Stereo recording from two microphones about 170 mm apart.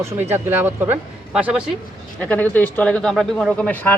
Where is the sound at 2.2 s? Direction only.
10° left (ahead or behind).